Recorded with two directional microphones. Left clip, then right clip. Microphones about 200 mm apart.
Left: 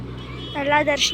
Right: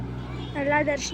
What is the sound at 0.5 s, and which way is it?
Speech, 5° right (ahead or behind).